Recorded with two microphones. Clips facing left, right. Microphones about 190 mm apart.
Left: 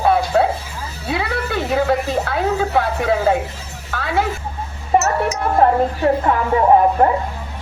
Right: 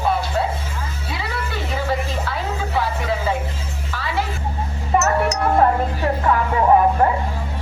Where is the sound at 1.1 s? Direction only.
60° left (ahead or behind).